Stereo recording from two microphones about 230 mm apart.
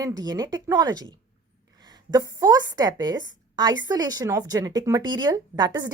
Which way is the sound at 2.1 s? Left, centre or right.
Centre.